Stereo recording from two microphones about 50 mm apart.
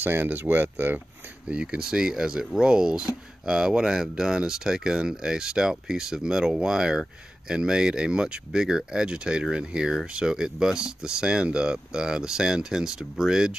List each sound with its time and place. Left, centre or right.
0.0 s speech: right
1.5 s speech: right